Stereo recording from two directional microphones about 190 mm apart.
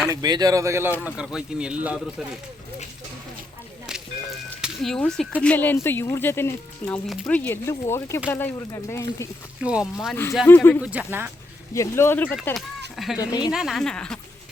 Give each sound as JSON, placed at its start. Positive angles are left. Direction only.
{"t": 0.1, "sound": "speech", "side_deg": -20}
{"t": 4.6, "sound": "speech", "side_deg": 0}
{"t": 9.6, "sound": "a woman's voice", "side_deg": -5}
{"t": 10.4, "sound": "speech", "side_deg": 10}
{"t": 10.8, "sound": "speech", "side_deg": -10}
{"t": 11.7, "sound": "speech", "side_deg": 15}
{"t": 13.1, "sound": "a woman's voice", "side_deg": 20}
{"t": 13.5, "sound": "a woman's voice", "side_deg": 0}